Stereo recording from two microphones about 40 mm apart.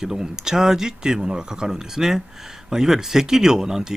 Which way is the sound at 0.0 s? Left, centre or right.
Centre.